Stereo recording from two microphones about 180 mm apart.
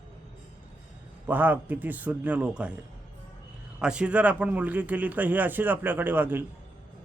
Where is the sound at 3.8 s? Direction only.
5° right (ahead or behind).